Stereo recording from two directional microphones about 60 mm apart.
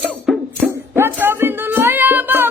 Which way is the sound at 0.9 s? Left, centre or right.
Right.